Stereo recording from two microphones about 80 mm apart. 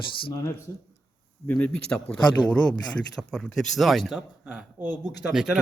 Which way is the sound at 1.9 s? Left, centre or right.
Centre.